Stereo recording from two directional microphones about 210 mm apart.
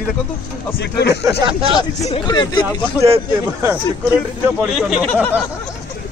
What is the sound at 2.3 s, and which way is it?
Speech, 20° left (ahead or behind).